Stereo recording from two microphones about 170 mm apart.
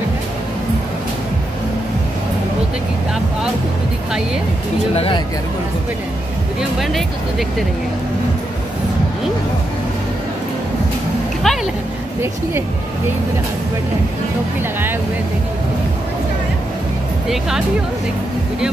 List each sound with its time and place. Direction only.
4.9 s speech: 35° left (ahead or behind)
6.8 s speech: centre (ahead or behind)
11.4 s a sound: centre (ahead or behind)
17.3 s speech: 5° right (ahead or behind)